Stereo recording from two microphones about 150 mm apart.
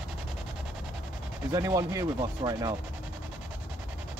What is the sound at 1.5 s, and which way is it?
Speech, 20° right (ahead or behind).